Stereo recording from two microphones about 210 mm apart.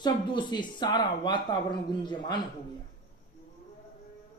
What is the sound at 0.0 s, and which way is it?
Speech, 20° left (ahead or behind).